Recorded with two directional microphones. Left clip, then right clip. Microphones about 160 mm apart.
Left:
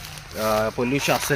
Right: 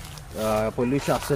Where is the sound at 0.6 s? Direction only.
20° left (ahead or behind).